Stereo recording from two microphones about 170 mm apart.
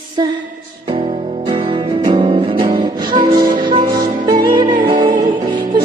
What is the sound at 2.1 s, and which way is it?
Music, 30° right (ahead or behind).